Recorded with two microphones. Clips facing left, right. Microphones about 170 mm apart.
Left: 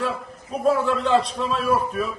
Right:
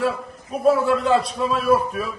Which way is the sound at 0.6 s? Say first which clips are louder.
Right 3 dB; 10° right (ahead or behind).